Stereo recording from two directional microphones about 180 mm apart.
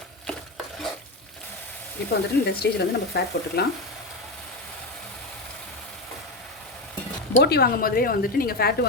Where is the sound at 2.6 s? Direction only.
60° left (ahead or behind).